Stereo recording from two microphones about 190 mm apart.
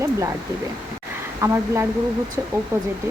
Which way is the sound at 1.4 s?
15° right (ahead or behind).